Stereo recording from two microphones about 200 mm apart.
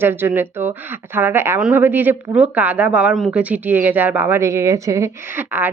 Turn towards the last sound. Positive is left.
turn(degrees=-10)  # may be behind; listen again after turning